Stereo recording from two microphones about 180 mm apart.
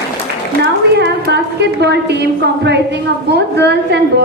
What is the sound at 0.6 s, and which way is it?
A woman's voice, 70° right (ahead or behind).